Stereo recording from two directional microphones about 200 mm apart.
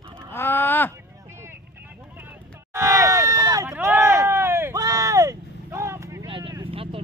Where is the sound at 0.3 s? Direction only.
10° left (ahead or behind).